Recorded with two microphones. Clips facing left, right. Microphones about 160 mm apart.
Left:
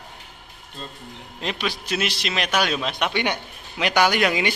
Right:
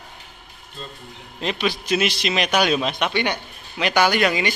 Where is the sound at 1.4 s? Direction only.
Centre (ahead or behind).